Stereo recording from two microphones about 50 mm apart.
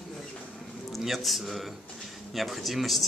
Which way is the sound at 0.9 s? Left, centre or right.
Centre.